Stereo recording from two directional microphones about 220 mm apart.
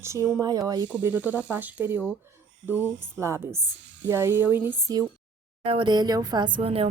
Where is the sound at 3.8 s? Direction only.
55° right (ahead or behind).